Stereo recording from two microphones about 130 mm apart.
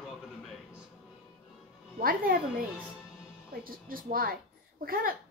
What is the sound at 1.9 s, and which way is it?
Speech, 90° right.